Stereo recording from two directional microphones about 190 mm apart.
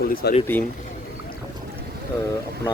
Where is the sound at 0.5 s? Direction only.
10° left (ahead or behind).